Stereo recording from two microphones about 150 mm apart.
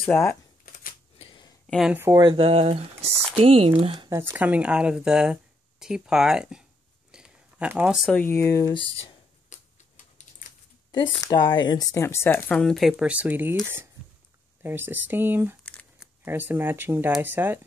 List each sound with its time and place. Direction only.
0.0 s speech: 10° left (ahead or behind)
1.1 s a sound: 35° left (ahead or behind)
1.7 s speech: centre (ahead or behind)
2.0 s speech: 20° right (ahead or behind)
2.2 s speech: 40° right (ahead or behind)
4.1 s speech: 15° right (ahead or behind)
7.1 s a sound: 5° right (ahead or behind)
8.2 s speech: 15° left (ahead or behind)
9.5 s tick-tock: 55° left (ahead or behind)
11.1 s speech: 25° left (ahead or behind); by 13.6 s 10° right (ahead or behind)
14.6 s speech: 15° right (ahead or behind)
15.6 s crumpling: 10° left (ahead or behind)
16.3 s speech: 15° right (ahead or behind)